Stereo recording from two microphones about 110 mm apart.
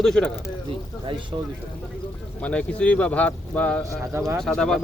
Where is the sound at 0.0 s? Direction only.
Centre (ahead or behind).